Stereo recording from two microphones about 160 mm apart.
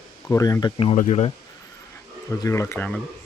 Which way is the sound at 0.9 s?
45° left (ahead or behind).